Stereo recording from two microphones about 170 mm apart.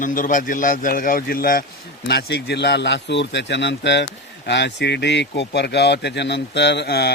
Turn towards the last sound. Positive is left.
turn(degrees=75)  # may be behind; listen again after turning